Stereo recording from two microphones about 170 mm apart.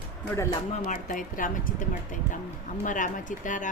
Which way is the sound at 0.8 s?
50° left (ahead or behind).